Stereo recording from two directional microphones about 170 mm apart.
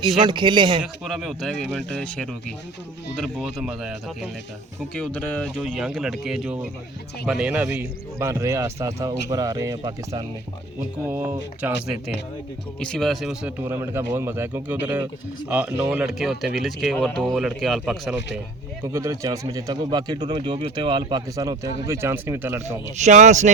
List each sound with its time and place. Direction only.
0.2 s speech: 25° right (ahead or behind)
0.8 s speech: centre (ahead or behind)
4.9 s a man's voice: 10° left (ahead or behind)
13.6 s a man's voice: 15° right (ahead or behind)
18.8 s speech: 15° right (ahead or behind)
23.0 s speech: 45° right (ahead or behind)